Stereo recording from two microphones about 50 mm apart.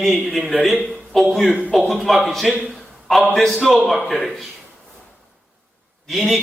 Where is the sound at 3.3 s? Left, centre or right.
Centre.